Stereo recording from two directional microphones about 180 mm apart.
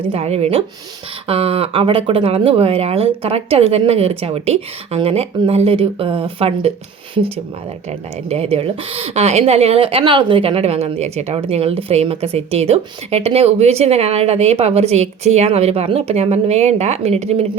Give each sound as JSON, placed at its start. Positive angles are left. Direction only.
{"t": 0.1, "sound": "a woman's voice", "side_deg": -35}
{"t": 8.3, "sound": "a woman's voice", "side_deg": -35}